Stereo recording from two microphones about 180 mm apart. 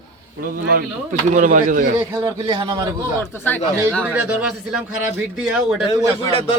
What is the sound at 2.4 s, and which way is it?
Speech, 25° right (ahead or behind).